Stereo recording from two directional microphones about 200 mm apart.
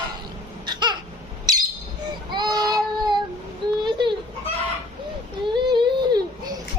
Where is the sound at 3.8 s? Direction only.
25° right (ahead or behind).